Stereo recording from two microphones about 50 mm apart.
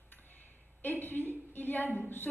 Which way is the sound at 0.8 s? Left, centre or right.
Left.